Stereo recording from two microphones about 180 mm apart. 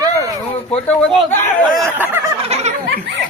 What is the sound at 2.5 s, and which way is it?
Laughter, 35° right (ahead or behind).